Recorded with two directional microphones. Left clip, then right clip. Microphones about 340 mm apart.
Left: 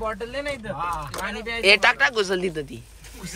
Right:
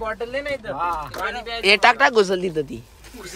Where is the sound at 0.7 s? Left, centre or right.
Right.